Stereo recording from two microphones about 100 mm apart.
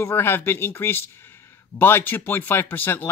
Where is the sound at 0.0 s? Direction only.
25° left (ahead or behind).